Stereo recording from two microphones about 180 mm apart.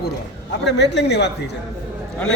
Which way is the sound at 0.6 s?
70° left (ahead or behind).